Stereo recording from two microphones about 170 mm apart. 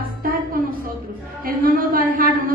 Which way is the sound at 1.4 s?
55° right (ahead or behind).